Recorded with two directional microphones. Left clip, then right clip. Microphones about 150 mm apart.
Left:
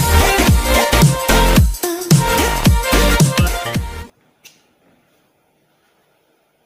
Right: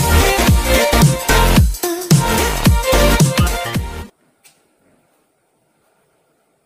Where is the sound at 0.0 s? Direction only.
Centre (ahead or behind).